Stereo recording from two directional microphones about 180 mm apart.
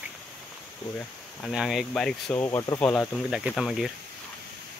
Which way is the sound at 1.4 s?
Centre (ahead or behind).